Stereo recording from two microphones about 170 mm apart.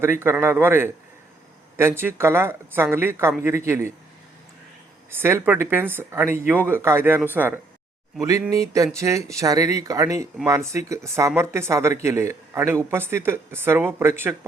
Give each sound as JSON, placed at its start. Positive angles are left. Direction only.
{"t": 0.0, "sound": "speech", "side_deg": -15}
{"t": 5.1, "sound": "speech", "side_deg": -15}